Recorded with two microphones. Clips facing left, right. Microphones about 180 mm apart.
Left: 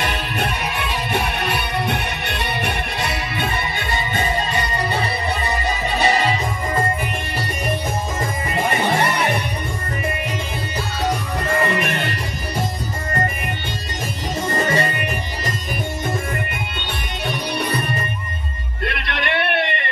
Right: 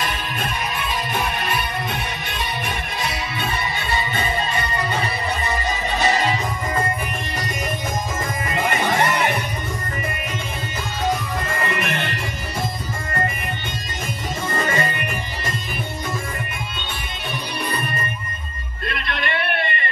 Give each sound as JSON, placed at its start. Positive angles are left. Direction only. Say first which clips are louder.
{"t": 0.0, "sound": "music", "louder": "left 3 dB", "side_deg": 70}
{"t": 14.6, "sound": "music", "louder": "left 3 dB", "side_deg": 35}
{"t": 17.3, "sound": "music", "louder": "left 4 dB", "side_deg": 75}
{"t": 18.9, "sound": "music", "louder": "left 2 dB", "side_deg": 70}